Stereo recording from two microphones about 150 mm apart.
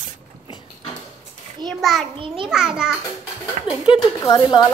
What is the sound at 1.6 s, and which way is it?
A child's voice, centre (ahead or behind).